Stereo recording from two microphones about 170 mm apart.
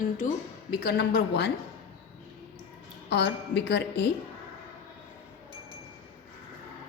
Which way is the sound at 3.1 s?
90° left.